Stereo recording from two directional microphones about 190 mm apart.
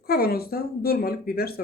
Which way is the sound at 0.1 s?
55° left (ahead or behind).